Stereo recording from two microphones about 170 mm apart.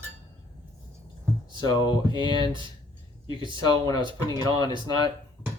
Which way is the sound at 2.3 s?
25° right (ahead or behind).